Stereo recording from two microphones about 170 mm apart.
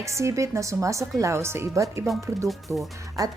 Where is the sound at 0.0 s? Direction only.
15° right (ahead or behind).